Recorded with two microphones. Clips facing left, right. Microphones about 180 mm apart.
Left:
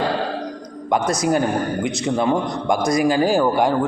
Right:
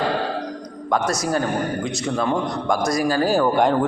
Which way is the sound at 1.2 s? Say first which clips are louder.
Left 3 dB; 20° left (ahead or behind).